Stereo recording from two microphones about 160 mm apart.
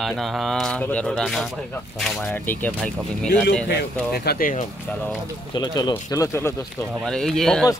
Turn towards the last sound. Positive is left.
turn(degrees=5)  # may be behind; listen again after turning